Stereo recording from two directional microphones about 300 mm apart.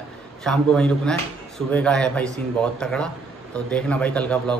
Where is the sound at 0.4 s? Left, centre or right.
Centre.